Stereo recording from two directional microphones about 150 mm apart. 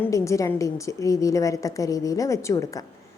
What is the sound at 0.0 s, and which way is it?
A woman's voice, 20° left (ahead or behind).